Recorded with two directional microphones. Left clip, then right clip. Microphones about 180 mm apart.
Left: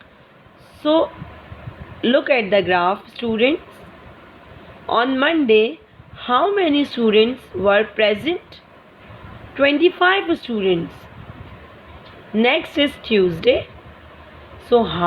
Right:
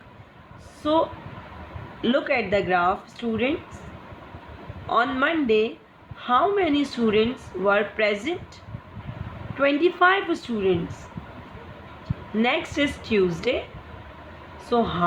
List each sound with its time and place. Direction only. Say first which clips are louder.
0.8 s a woman's voice: left 5 dB; 30° left (ahead or behind)
4.9 s speech: left 5 dB; 30° left (ahead or behind)
9.6 s a woman's voice: left 5 dB; 30° left (ahead or behind)
12.4 s a woman's voice: left 6 dB; 30° left (ahead or behind)
14.7 s a woman's voice: left 7 dB; 30° left (ahead or behind)